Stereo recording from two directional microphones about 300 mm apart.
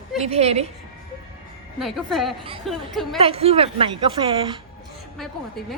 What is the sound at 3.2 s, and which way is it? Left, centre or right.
A woman's voice, centre.